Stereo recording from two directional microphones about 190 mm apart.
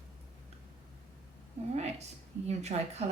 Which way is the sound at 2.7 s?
35° right (ahead or behind).